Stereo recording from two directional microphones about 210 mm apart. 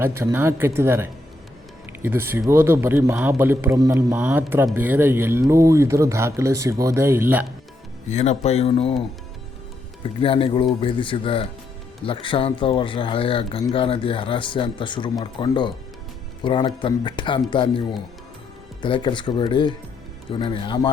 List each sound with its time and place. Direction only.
0.0 s a man's voice: 10° right (ahead or behind)
8.0 s speech: 30° left (ahead or behind)
10.0 s speech: 25° left (ahead or behind)